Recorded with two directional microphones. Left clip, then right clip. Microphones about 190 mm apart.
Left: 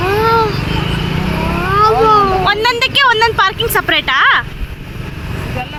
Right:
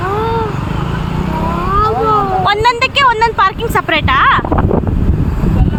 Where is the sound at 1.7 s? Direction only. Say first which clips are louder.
Left 3 dB; 20° left (ahead or behind).